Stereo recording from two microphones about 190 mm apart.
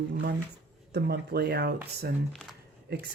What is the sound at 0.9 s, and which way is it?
Speech, 60° right (ahead or behind).